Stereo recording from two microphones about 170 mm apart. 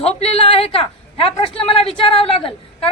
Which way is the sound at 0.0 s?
35° left (ahead or behind).